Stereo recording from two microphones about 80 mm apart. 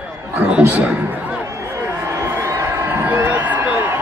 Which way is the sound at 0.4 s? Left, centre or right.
Centre.